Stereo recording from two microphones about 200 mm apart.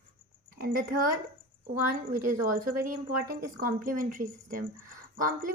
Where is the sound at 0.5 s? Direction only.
45° right (ahead or behind).